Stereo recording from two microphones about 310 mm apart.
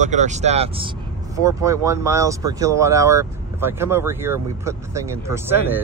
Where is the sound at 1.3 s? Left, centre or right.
Centre.